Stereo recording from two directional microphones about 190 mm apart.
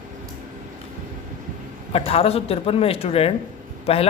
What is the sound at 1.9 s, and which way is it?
Speech, 30° left (ahead or behind).